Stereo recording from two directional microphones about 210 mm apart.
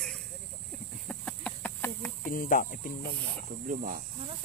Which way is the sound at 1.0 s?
5° left (ahead or behind).